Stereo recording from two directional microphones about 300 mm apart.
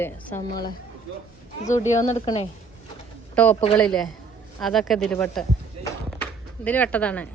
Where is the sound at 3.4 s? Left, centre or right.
Centre.